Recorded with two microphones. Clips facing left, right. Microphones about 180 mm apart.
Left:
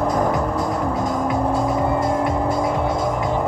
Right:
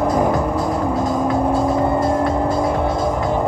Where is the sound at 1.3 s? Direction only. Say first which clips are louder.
Right 3 dB; 5° right (ahead or behind).